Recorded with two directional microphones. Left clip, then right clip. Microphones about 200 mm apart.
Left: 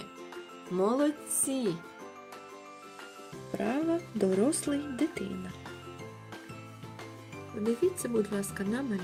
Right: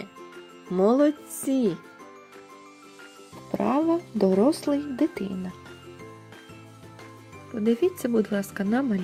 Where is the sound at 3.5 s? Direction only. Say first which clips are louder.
Right 7 dB; 25° right (ahead or behind).